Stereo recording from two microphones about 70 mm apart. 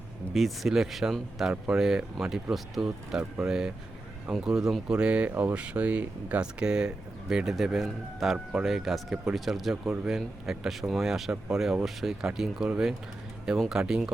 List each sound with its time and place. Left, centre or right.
0.3 s speech: centre
5.3 s speech: right
5.5 s speech: centre